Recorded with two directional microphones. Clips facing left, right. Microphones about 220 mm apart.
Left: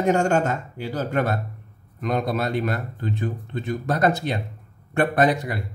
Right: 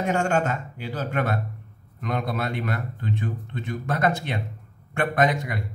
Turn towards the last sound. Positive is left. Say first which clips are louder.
# left 3 dB
turn(degrees=35)  # may be behind; listen again after turning